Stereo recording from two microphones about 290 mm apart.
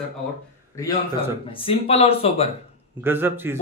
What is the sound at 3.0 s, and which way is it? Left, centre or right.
Speech, centre.